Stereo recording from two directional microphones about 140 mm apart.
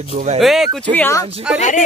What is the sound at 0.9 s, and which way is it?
Speech, 15° left (ahead or behind).